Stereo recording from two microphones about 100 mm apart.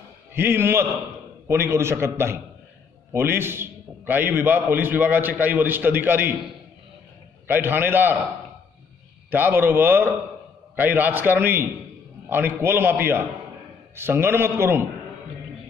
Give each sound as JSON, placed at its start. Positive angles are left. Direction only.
{"t": 0.3, "sound": "a man's voice", "side_deg": -25}
{"t": 7.4, "sound": "a man's voice", "side_deg": -20}
{"t": 9.3, "sound": "a man's voice", "side_deg": -20}